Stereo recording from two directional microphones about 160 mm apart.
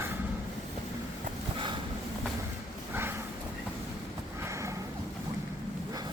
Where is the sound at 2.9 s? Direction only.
15° right (ahead or behind).